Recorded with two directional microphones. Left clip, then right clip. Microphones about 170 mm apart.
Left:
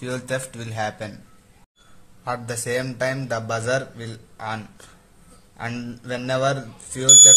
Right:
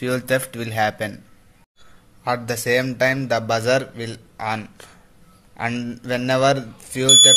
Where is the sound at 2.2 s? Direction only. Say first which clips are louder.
Right 5 dB; 30° right (ahead or behind).